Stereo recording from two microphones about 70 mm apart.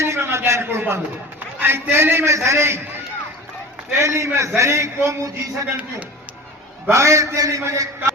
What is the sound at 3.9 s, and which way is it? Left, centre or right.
A man's voice, right.